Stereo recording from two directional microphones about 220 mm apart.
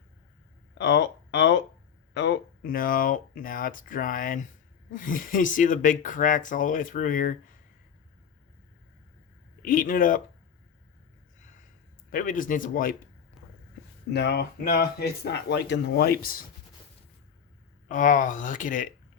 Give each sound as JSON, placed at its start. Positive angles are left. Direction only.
{"t": 0.8, "sound": "speech", "side_deg": 55}
{"t": 9.6, "sound": "speech", "side_deg": 40}
{"t": 12.1, "sound": "speech", "side_deg": 40}
{"t": 14.1, "sound": "speech", "side_deg": 50}
{"t": 17.8, "sound": "speech", "side_deg": 35}